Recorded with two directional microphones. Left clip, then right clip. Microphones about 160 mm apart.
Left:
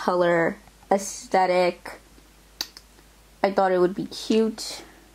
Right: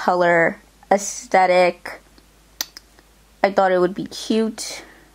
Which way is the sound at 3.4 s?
15° right (ahead or behind).